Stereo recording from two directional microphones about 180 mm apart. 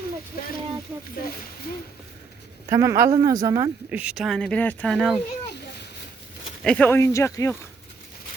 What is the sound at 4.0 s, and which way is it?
Speech, 5° right (ahead or behind).